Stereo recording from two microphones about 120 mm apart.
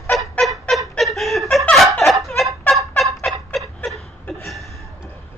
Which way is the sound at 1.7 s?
Centre (ahead or behind).